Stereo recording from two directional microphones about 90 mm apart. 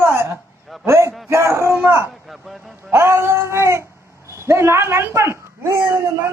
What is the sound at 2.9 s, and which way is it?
A woman's voice, 30° right (ahead or behind).